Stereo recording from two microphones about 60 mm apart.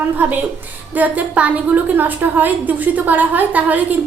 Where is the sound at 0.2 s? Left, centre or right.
Right.